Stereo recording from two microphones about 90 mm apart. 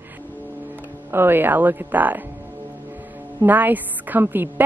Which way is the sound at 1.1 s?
25° right (ahead or behind).